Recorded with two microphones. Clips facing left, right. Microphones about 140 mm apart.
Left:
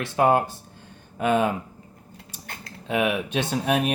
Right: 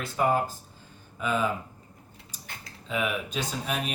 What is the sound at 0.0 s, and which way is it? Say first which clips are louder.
Speech: left 5 dB; 75° left (ahead or behind).